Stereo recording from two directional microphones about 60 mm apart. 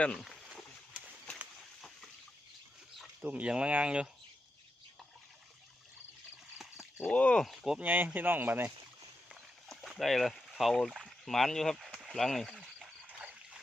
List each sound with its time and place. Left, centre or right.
0.1 s speech: centre
3.2 s speech: right
7.1 s speech: centre
7.3 s speech: centre
7.8 s speech: right
9.3 s walk: centre
10.0 s speech: centre
13.1 s a sound: centre